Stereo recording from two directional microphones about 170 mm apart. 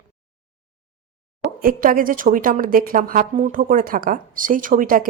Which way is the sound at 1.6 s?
55° right (ahead or behind).